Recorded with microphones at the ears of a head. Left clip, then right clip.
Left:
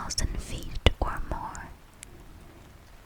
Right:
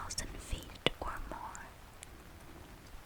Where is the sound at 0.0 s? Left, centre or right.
Left.